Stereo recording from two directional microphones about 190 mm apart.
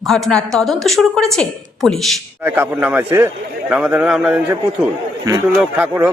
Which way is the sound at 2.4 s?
10° right (ahead or behind).